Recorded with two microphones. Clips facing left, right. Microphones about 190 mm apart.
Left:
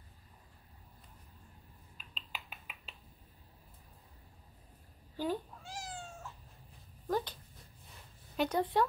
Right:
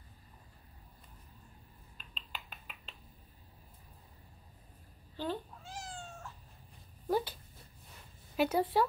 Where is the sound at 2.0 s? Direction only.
5° left (ahead or behind).